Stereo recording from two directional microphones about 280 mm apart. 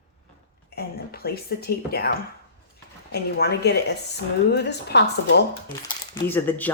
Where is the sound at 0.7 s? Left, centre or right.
Left.